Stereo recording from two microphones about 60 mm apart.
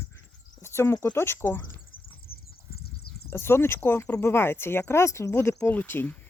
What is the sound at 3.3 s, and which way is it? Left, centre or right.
A man's voice, left.